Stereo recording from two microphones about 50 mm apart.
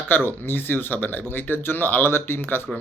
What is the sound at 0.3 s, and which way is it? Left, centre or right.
Speech, left.